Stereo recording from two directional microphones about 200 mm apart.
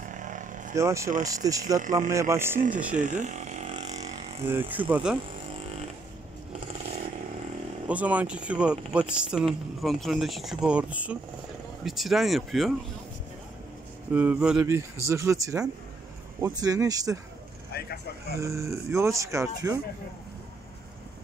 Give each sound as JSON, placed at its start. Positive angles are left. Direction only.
{"t": 0.0, "sound": "vehicle", "side_deg": -40}
{"t": 0.7, "sound": "speech", "side_deg": -15}
{"t": 3.0, "sound": "a sound", "side_deg": -35}
{"t": 4.5, "sound": "speech", "side_deg": -10}
{"t": 7.9, "sound": "speech", "side_deg": -5}
{"t": 14.1, "sound": "speech", "side_deg": -5}
{"t": 17.7, "sound": "speech", "side_deg": 50}
{"t": 18.4, "sound": "speech", "side_deg": -15}